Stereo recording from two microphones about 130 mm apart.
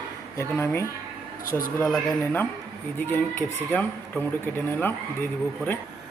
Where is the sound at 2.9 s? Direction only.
15° left (ahead or behind).